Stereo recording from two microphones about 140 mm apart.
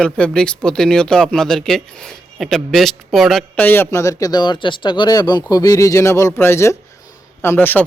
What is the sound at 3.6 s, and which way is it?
Speech, 15° left (ahead or behind).